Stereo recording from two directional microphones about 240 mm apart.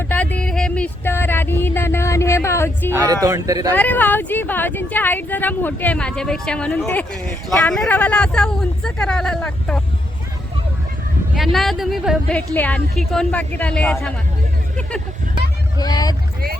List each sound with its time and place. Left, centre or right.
0.1 s a sound: centre
2.9 s speech: centre
3.8 s speech: centre
11.3 s speech: centre
15.8 s speech: centre